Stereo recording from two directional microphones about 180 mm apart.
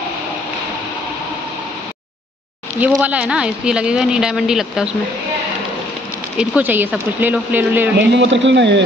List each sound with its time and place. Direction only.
3.0 s a woman's voice: 5° right (ahead or behind)
6.3 s speech: 10° right (ahead or behind)
8.1 s speech: 85° right